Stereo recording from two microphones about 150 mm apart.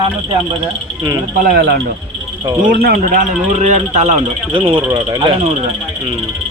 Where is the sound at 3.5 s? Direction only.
50° right (ahead or behind); by 5.3 s 25° right (ahead or behind).